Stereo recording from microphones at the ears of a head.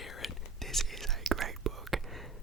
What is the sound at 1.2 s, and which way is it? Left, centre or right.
Whispering, right.